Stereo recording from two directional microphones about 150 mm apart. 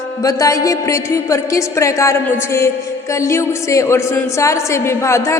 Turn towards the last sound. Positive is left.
turn(degrees=20)  # may be behind; listen again after turning